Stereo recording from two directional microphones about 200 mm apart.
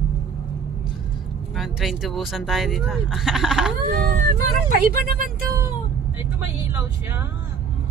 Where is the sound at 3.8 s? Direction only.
45° right (ahead or behind).